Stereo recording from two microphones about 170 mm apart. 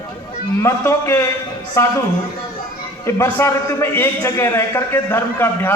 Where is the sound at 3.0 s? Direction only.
15° left (ahead or behind).